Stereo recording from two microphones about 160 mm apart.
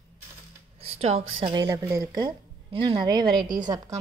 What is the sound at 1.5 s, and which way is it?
A woman's voice, 20° right (ahead or behind).